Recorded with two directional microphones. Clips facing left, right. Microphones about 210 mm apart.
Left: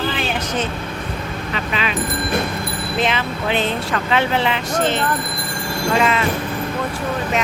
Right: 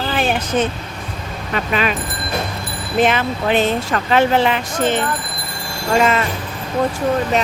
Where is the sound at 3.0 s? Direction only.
50° right (ahead or behind).